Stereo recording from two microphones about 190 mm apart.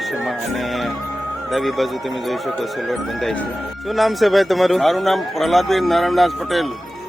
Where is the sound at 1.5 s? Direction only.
Centre (ahead or behind).